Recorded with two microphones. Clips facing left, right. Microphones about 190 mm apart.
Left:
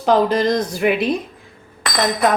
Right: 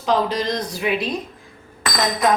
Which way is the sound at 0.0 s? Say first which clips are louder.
Left 5 dB; 50° left (ahead or behind).